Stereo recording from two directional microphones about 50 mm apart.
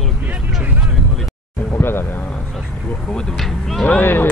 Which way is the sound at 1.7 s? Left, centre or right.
Left.